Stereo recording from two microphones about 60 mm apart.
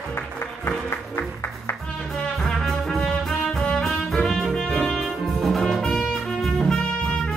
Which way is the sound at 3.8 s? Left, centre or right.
Centre.